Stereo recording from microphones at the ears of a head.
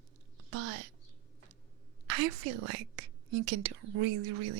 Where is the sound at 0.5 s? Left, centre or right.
Right.